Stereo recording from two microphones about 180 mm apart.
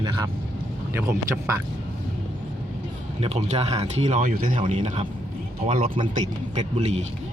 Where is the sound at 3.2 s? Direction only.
35° right (ahead or behind).